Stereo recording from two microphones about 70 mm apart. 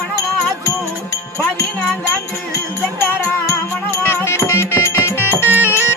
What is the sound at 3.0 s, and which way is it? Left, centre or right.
Music, left.